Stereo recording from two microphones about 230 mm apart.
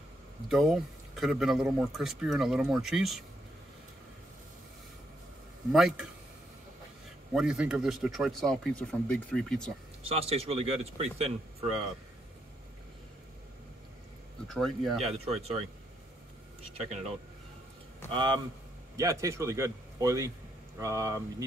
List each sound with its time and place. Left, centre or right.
0.5 s speech: centre
5.7 s speech: centre
7.3 s speech: centre
10.0 s speech: right
14.5 s speech: centre
15.1 s speech: right
16.7 s speech: right
18.1 s a man's voice: centre